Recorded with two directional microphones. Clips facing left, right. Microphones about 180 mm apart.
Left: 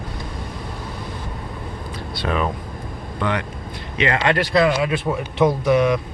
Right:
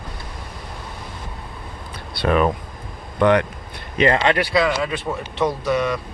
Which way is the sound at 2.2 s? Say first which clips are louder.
Right 5 dB; 60° right (ahead or behind).